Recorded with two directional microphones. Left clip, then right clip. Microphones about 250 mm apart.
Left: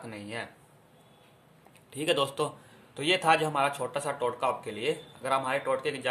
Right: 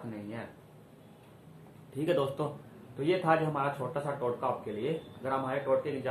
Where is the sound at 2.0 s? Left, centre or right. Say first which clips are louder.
Left 3 dB; left.